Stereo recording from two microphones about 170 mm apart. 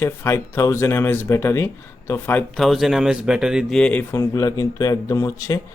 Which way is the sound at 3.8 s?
10° left (ahead or behind).